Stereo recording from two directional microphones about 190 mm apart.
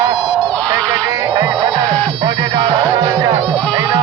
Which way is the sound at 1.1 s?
20° right (ahead or behind).